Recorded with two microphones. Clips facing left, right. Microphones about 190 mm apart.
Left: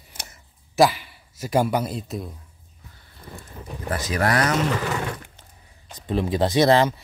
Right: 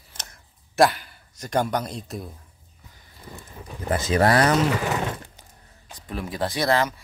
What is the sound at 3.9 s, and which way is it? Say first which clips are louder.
Speech: right 3 dB; 25° right (ahead or behind).